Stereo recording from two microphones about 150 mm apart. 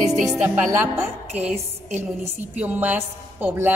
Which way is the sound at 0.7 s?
20° right (ahead or behind).